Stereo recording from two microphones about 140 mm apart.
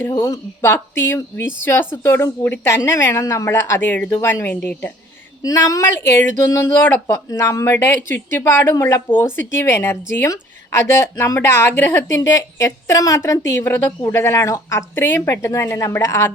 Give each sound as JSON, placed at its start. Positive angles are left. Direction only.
{"t": 0.1, "sound": "speech", "side_deg": 20}